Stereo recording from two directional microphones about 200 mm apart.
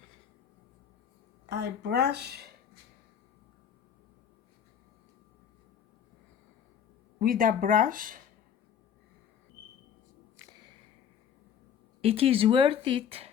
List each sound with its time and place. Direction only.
1.5 s speech: 55° right (ahead or behind)
7.2 s speech: 45° right (ahead or behind)
10.3 s a sound: 20° right (ahead or behind)
12.0 s speech: 30° right (ahead or behind)